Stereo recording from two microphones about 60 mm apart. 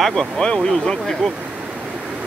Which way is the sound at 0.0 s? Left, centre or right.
Centre.